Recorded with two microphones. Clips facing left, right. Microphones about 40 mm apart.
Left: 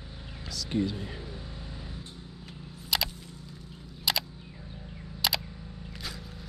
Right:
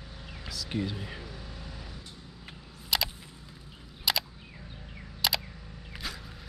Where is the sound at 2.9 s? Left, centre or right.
Centre.